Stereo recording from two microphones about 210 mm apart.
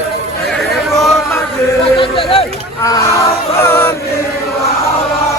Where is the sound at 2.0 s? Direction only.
25° left (ahead or behind).